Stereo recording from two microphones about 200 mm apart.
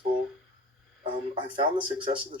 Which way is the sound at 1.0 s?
25° right (ahead or behind).